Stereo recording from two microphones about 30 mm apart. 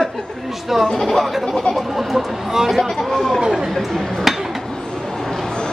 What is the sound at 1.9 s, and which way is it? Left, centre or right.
Speech, centre.